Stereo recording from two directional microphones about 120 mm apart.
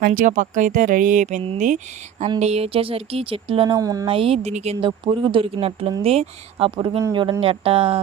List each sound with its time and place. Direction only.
0.3 s speech: 90° right
2.4 s speech: 60° right (ahead or behind)
3.8 s speech: 30° right (ahead or behind)
4.0 s speech: 50° right (ahead or behind)
4.8 s speech: 45° right (ahead or behind)